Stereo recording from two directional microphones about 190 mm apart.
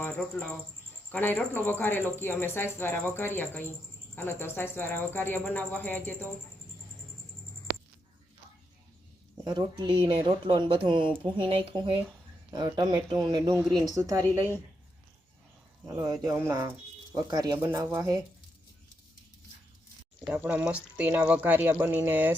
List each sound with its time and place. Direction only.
0.0 s speech: 10° left (ahead or behind)
9.4 s speech: 20° right (ahead or behind)
16.0 s speech: 20° right (ahead or behind)
20.2 s speech: 10° right (ahead or behind)